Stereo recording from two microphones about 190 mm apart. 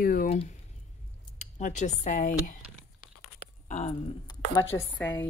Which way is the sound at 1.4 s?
40° left (ahead or behind).